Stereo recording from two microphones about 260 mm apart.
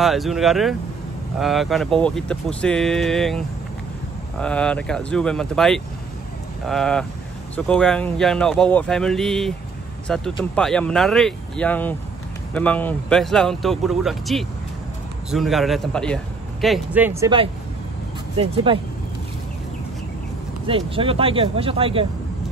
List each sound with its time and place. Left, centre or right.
0.0 s speech: centre
20.6 s speech: right